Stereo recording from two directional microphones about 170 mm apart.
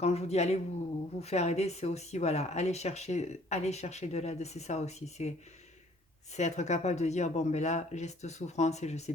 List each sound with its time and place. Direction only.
0.0 s speech: 40° left (ahead or behind)
6.3 s speech: 40° left (ahead or behind)